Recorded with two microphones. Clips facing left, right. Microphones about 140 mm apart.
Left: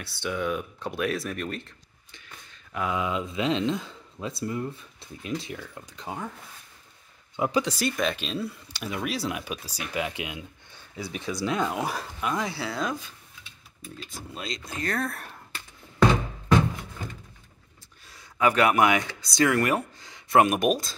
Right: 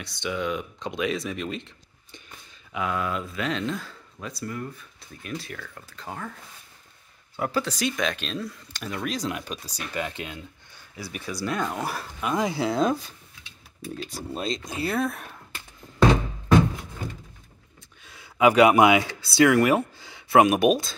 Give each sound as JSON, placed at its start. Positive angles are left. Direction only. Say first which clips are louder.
{"t": 0.0, "sound": "speech", "louder": "even", "side_deg": 5}
{"t": 2.7, "sound": "speech", "louder": "even", "side_deg": 5}
{"t": 3.0, "sound": "speech", "louder": "left 1 dB", "side_deg": 15}
{"t": 7.3, "sound": "speech", "louder": "left 2 dB", "side_deg": 15}
{"t": 11.4, "sound": "speech", "louder": "left 1 dB", "side_deg": 5}
{"t": 12.4, "sound": "speech", "louder": "right 7 dB", "side_deg": -20}
{"t": 13.8, "sound": "speech", "louder": "right 7 dB", "side_deg": -80}
{"t": 14.4, "sound": "speech", "louder": "right 6 dB", "side_deg": -25}
{"t": 14.7, "sound": "speech", "louder": "right 2 dB", "side_deg": -10}
{"t": 18.1, "sound": "speech", "louder": "right 5 dB", "side_deg": -10}